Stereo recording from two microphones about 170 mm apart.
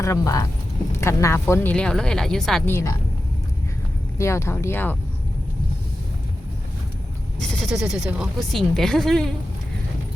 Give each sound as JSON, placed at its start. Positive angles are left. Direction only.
{"t": 0.0, "sound": "speech", "side_deg": 20}
{"t": 2.6, "sound": "speech", "side_deg": 15}
{"t": 4.2, "sound": "speech", "side_deg": 15}
{"t": 7.3, "sound": "speech", "side_deg": 5}